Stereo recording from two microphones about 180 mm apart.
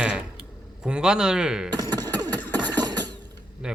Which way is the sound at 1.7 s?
20° right (ahead or behind).